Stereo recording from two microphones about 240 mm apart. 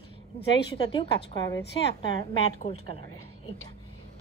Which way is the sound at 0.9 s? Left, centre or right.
Centre.